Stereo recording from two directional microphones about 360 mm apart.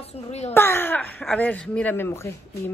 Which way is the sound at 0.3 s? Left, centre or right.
Centre.